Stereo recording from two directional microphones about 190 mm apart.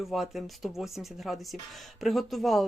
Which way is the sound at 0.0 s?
Centre (ahead or behind).